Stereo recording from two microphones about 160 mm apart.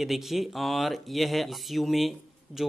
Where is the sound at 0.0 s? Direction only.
Centre (ahead or behind).